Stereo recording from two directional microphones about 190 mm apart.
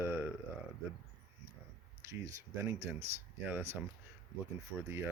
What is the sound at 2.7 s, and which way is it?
Speech, 35° right (ahead or behind).